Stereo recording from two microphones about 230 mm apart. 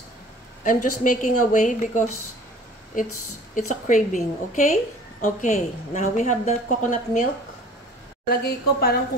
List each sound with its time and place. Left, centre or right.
1.0 s a woman's voice: left
8.3 s a woman's voice: left